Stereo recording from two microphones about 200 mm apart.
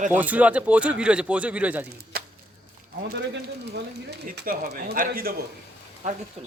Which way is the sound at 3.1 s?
60° right (ahead or behind).